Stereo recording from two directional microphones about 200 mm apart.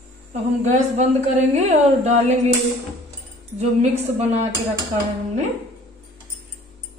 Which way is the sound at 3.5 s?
30° right (ahead or behind).